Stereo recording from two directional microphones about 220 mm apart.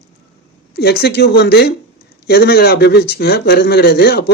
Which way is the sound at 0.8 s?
45° left (ahead or behind).